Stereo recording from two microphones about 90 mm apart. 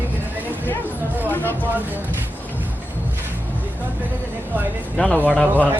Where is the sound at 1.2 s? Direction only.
20° left (ahead or behind).